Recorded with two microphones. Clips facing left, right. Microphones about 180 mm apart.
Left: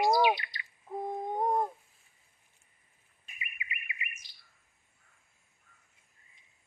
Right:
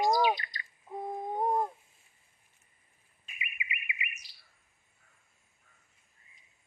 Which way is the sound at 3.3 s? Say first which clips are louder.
Right 2 dB; 20° right (ahead or behind).